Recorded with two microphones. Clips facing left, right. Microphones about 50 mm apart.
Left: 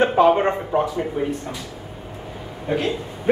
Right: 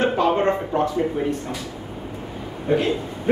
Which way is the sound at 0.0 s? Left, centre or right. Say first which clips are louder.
Left 3 dB; centre.